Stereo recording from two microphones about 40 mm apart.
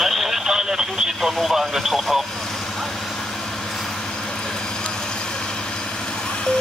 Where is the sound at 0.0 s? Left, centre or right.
Centre.